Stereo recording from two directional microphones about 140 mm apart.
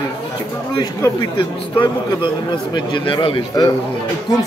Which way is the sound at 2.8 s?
35° left (ahead or behind).